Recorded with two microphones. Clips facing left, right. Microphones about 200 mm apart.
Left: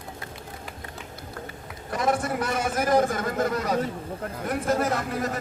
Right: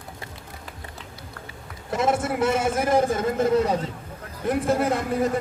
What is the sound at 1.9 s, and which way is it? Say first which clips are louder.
A man's voice: right 2 dB; 25° right (ahead or behind).